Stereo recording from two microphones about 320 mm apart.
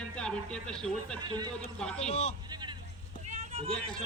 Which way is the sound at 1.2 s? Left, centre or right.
Centre.